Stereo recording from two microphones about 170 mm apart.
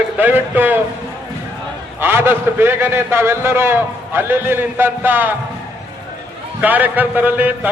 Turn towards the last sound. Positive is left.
turn(degrees=-10)  # may be behind; listen again after turning